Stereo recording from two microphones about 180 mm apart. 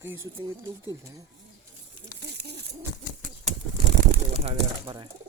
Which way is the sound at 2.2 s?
70° right (ahead or behind).